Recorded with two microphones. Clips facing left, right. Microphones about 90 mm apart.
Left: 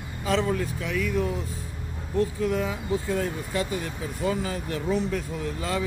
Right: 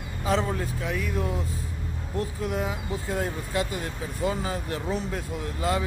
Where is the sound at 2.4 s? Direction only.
20° right (ahead or behind).